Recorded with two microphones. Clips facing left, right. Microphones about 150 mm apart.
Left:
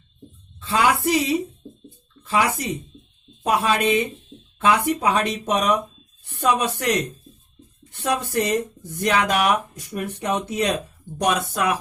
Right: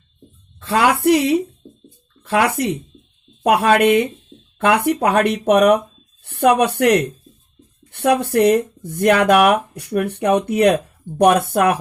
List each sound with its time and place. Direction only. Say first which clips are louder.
0.6 s speech: right 4 dB; 60° right (ahead or behind)